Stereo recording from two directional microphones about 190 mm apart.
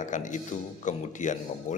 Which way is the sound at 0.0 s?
40° left (ahead or behind).